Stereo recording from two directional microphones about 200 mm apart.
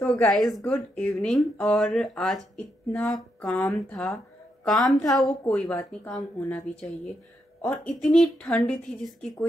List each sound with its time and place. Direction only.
0.0 s a woman's voice: 5° left (ahead or behind)
8.0 s a woman's voice: centre (ahead or behind)